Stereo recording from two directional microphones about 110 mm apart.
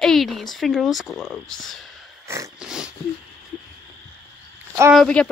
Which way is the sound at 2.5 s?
5° right (ahead or behind).